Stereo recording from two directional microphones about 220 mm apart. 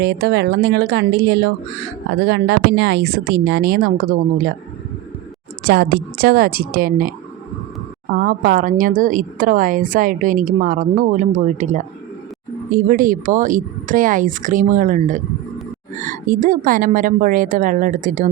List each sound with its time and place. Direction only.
0.0 s speech: 50° right (ahead or behind)
5.6 s speech: 45° right (ahead or behind)
8.1 s speech: 40° right (ahead or behind)